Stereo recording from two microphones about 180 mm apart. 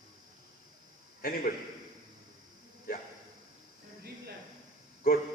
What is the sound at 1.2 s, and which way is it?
Speech, 55° left (ahead or behind).